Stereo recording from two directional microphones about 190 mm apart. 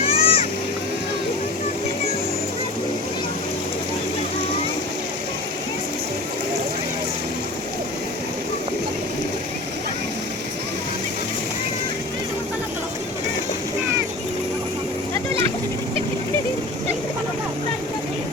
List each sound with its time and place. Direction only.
0.0 s vehicle: 30° left (ahead or behind)